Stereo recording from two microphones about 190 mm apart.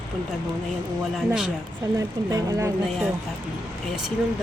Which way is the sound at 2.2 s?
15° right (ahead or behind).